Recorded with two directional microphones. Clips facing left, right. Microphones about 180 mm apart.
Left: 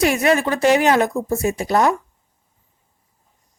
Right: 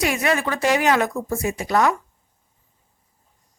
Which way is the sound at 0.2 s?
30° left (ahead or behind).